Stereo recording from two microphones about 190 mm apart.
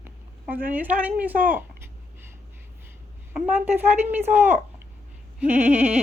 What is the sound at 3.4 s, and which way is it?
A woman's voice, 10° right (ahead or behind).